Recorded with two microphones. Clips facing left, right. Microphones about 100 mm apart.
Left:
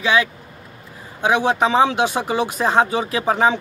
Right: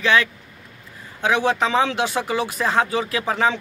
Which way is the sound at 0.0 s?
15° left (ahead or behind).